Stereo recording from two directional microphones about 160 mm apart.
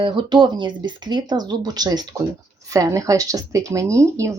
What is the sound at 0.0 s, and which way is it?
A woman's voice, 30° right (ahead or behind).